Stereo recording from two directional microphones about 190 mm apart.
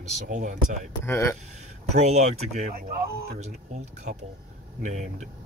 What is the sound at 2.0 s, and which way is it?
Speech, 35° right (ahead or behind).